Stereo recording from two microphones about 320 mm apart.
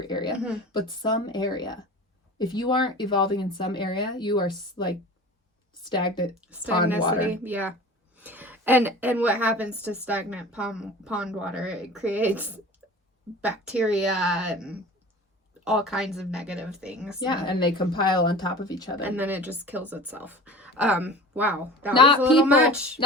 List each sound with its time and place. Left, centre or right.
0.0 s speech: centre
7.2 s a woman's voice: centre
17.2 s speech: centre
19.0 s a woman's voice: centre
21.9 s speech: centre
22.2 s a woman's voice: centre